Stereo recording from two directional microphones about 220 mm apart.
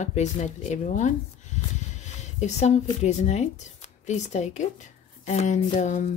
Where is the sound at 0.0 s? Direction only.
30° left (ahead or behind).